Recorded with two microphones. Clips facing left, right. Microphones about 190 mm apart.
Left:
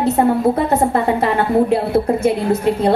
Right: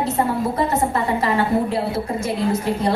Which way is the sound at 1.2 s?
60° left (ahead or behind).